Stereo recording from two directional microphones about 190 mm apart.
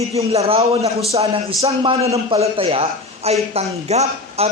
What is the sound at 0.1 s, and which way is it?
A man's voice, 30° right (ahead or behind).